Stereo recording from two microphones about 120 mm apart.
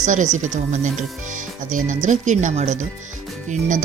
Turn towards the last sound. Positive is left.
turn(degrees=-90)